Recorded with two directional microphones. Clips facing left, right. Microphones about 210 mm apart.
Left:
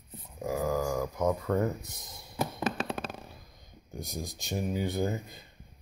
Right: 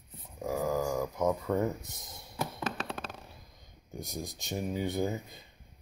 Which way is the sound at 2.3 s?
10° left (ahead or behind).